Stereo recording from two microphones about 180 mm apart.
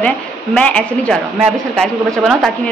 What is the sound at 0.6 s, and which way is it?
Speech, 5° left (ahead or behind).